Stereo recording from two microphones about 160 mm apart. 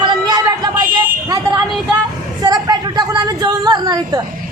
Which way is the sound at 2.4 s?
25° right (ahead or behind).